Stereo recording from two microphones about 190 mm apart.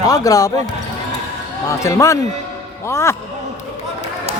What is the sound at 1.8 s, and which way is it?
Speech, 15° left (ahead or behind).